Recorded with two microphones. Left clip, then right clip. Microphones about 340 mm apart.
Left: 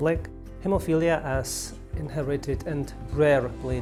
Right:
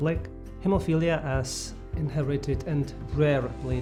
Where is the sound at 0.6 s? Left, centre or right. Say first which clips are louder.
Left 2 dB; left.